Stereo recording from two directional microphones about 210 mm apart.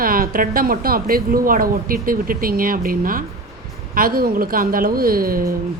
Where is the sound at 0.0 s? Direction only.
45° right (ahead or behind).